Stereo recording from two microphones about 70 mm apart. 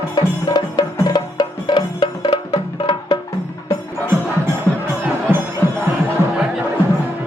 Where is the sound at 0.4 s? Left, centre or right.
Left.